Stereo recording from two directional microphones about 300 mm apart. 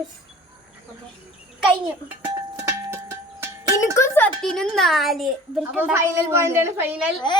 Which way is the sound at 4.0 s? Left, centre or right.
Centre.